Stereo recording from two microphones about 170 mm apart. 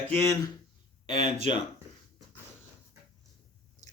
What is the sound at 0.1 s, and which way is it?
Speech, 15° left (ahead or behind).